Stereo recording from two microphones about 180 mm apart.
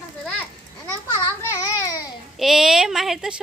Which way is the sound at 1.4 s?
15° left (ahead or behind).